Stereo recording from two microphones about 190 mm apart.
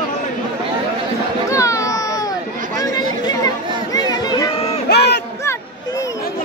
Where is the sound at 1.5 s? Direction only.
15° left (ahead or behind).